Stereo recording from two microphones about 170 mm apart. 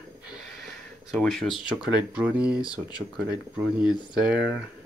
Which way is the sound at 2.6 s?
20° left (ahead or behind).